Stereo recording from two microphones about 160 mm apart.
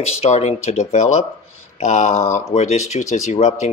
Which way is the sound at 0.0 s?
40° left (ahead or behind).